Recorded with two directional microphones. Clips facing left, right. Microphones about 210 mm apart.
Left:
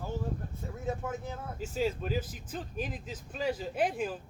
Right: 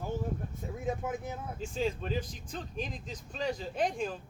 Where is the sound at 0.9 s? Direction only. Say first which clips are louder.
Right 1 dB; 15° right (ahead or behind).